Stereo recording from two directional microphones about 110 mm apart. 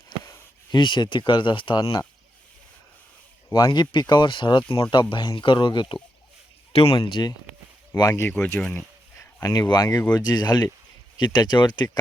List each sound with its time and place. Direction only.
0.8 s speech: 45° left (ahead or behind)
1.8 s speech: 35° left (ahead or behind)
3.7 s speech: 45° left (ahead or behind)
6.7 s speech: 55° left (ahead or behind)
8.1 s speech: 20° left (ahead or behind)
9.4 s speech: 35° left (ahead or behind)